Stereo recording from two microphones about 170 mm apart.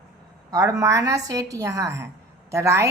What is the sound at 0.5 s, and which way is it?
A woman's voice, 20° right (ahead or behind).